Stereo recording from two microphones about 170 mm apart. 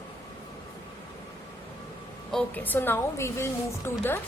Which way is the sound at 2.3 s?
5° left (ahead or behind).